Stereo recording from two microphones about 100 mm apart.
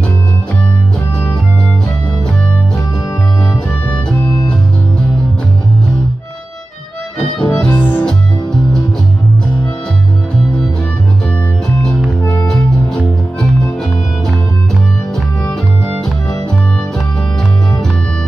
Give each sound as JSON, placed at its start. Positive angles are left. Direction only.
{"t": 7.2, "sound": "music", "side_deg": 5}
{"t": 7.7, "sound": "music", "side_deg": 20}
{"t": 12.7, "sound": "music", "side_deg": 5}